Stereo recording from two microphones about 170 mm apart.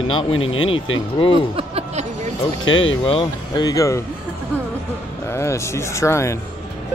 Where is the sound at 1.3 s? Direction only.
35° right (ahead or behind).